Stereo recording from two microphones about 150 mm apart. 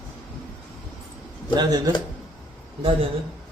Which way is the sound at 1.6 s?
25° right (ahead or behind).